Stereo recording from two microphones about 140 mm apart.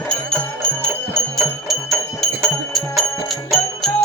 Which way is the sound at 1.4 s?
Centre (ahead or behind).